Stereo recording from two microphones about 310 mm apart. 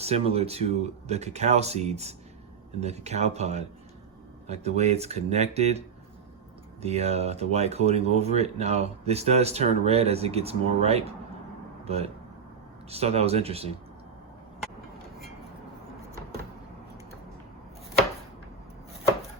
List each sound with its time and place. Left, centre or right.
0.0 s speech: centre
6.8 s speech: centre